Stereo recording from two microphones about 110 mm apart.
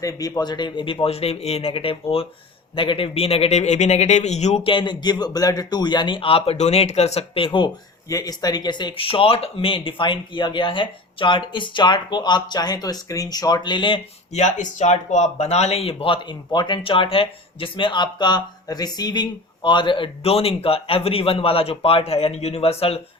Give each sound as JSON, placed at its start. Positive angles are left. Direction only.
{"t": 0.0, "sound": "a man's voice", "side_deg": 30}
{"t": 4.6, "sound": "speech", "side_deg": 50}
{"t": 8.1, "sound": "speech", "side_deg": 35}
{"t": 14.3, "sound": "speech", "side_deg": 90}